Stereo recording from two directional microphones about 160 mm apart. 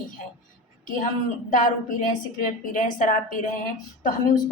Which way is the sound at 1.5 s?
55° left (ahead or behind).